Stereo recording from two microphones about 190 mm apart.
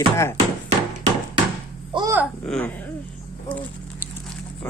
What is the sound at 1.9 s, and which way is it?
Speech, 25° right (ahead or behind).